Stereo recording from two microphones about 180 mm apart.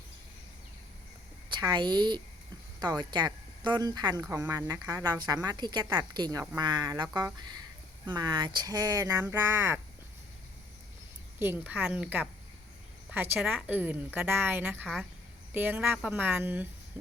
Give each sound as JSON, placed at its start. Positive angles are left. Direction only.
{"t": 1.5, "sound": "a woman's voice", "side_deg": -25}
{"t": 11.3, "sound": "speech", "side_deg": -10}
{"t": 13.3, "sound": "speech", "side_deg": -10}